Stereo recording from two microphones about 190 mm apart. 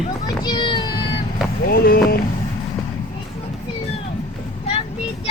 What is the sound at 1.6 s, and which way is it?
Run, 55° left (ahead or behind).